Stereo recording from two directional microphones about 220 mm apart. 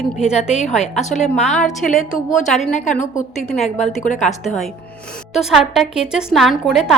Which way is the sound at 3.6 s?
30° left (ahead or behind).